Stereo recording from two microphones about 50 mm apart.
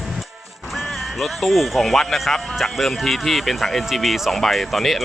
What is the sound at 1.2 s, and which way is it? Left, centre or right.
Speech, centre.